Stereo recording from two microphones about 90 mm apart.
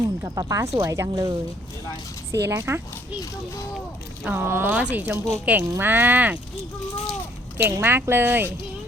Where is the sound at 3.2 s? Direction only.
35° left (ahead or behind).